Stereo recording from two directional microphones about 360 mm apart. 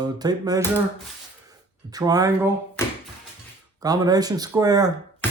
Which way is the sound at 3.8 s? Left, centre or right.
Centre.